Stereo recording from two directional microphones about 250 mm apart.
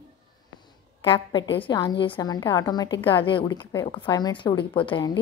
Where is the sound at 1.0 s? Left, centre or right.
Centre.